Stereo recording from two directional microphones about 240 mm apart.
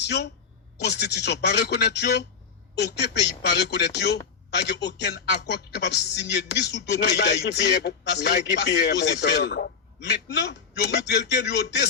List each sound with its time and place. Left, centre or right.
0.8 s speech: left